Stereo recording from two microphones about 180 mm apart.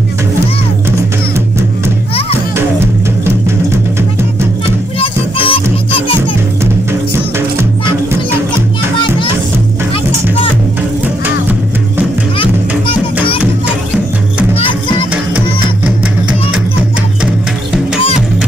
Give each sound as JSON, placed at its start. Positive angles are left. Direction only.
{"t": 3.3, "sound": "music", "side_deg": -15}
{"t": 4.9, "sound": "music", "side_deg": 30}
{"t": 6.6, "sound": "music", "side_deg": -15}
{"t": 12.4, "sound": "music", "side_deg": 30}